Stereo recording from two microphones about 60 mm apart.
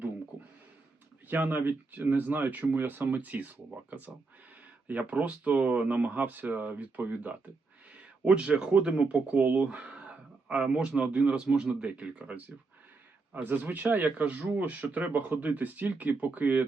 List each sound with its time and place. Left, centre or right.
1.3 s speech: right